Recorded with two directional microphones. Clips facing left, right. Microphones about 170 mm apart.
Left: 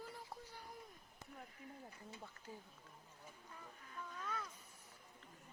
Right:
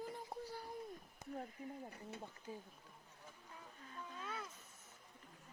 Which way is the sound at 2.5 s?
15° right (ahead or behind).